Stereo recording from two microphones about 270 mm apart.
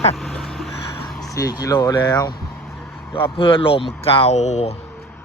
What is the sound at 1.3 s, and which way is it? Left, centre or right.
Speech, centre.